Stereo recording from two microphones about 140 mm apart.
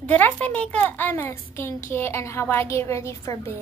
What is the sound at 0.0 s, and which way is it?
A child's voice, 10° left (ahead or behind).